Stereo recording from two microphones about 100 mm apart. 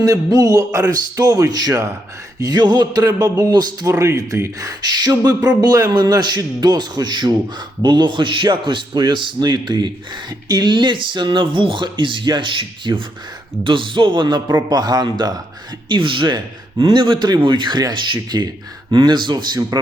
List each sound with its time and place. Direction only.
0.0 s a man's voice: 35° right (ahead or behind)
3.9 s a man's voice: 30° right (ahead or behind)
15.9 s speech: 55° right (ahead or behind)
19.7 s speech: 35° right (ahead or behind)